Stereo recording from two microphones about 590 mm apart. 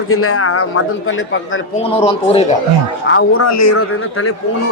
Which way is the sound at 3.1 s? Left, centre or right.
Left.